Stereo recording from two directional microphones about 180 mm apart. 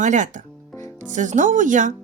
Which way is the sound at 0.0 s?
45° right (ahead or behind).